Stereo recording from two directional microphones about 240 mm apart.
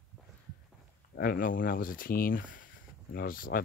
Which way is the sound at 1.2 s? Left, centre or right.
Left.